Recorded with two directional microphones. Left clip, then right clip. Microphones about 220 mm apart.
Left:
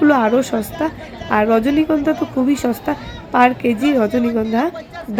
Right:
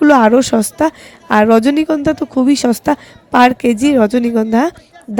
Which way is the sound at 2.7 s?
45° right (ahead or behind).